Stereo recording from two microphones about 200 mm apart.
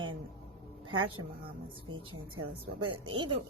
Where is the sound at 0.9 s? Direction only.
90° right.